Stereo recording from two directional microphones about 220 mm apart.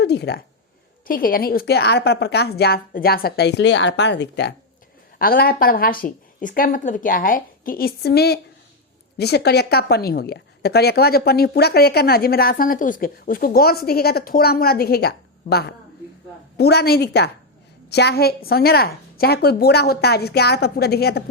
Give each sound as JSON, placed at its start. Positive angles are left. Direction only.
{"t": 0.0, "sound": "a woman's voice", "side_deg": 50}